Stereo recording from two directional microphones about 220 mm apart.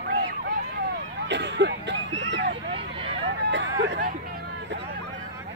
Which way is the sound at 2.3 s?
55° right (ahead or behind).